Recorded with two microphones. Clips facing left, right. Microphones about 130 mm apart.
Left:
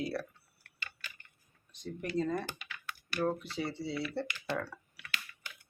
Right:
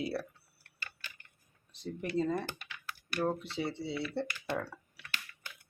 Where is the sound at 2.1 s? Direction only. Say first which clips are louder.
Right 1 dB; 25° right (ahead or behind).